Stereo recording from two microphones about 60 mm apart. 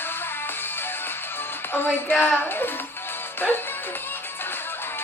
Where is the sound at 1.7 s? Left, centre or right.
Left.